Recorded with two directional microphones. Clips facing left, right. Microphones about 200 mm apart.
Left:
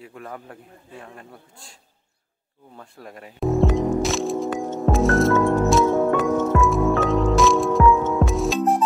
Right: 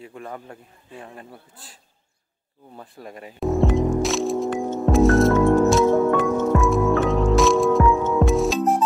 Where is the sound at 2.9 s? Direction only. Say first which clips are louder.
Right 2 dB; centre (ahead or behind).